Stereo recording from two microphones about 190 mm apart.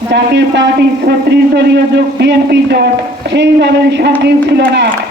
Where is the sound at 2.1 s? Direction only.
60° right (ahead or behind).